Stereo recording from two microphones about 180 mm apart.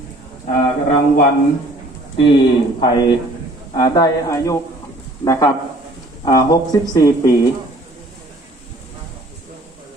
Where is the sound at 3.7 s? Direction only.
25° left (ahead or behind).